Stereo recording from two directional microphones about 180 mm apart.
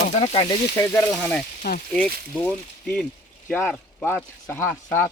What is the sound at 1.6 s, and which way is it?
Speech, 55° left (ahead or behind).